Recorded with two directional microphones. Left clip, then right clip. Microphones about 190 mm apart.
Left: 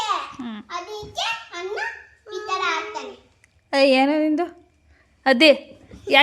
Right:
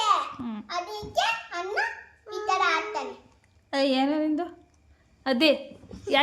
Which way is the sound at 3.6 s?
35° left (ahead or behind).